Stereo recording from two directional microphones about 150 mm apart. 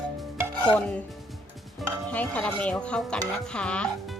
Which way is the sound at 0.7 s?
10° left (ahead or behind).